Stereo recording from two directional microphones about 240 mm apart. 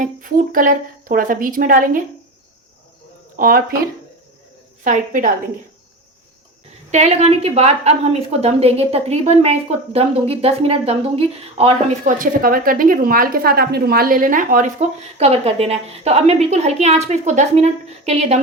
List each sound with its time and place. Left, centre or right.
0.0 s a woman's voice: right
3.3 s speech: right
4.8 s a woman's voice: right
6.9 s a woman's voice: right